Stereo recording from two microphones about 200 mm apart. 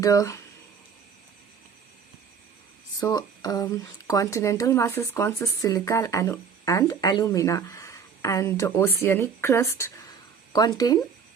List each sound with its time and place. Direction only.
0.0 s speech: 15° left (ahead or behind)
3.0 s speech: 20° left (ahead or behind)